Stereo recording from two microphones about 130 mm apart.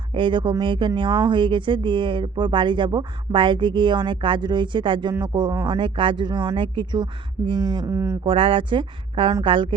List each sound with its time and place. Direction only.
0.1 s speech: 40° right (ahead or behind)
7.9 s speech: 20° right (ahead or behind)
8.2 s speech: 40° right (ahead or behind)